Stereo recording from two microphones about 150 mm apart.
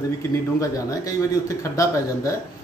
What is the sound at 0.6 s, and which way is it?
Speech, 20° left (ahead or behind).